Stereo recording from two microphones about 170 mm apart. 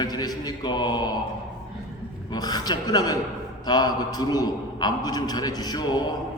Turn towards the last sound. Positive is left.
turn(degrees=25)  # may be behind; listen again after turning